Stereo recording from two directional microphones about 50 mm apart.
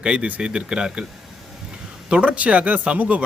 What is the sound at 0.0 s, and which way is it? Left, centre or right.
Speech, right.